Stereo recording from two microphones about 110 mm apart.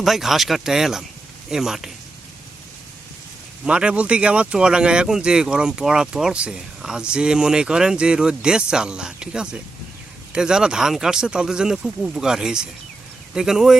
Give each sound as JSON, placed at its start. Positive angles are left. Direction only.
{"t": 0.0, "sound": "speech", "side_deg": 0}
{"t": 3.7, "sound": "speech", "side_deg": -10}